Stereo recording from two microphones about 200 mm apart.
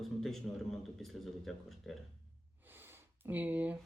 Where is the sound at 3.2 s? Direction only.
10° right (ahead or behind).